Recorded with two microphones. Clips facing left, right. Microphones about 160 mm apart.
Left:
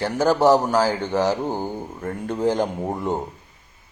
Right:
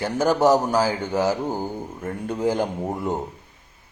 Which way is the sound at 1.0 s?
10° right (ahead or behind).